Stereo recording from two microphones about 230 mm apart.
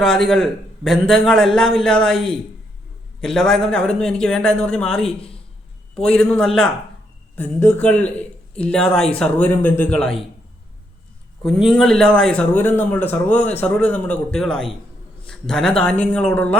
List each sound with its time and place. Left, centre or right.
0.0 s a man's voice: centre
5.0 s speech: left
6.1 s a man's voice: centre
11.4 s a man's voice: centre